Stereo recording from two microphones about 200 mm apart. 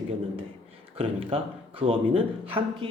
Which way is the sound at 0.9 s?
30° right (ahead or behind).